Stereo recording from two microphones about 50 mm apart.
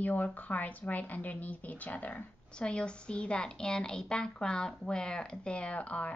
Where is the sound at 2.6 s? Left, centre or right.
Centre.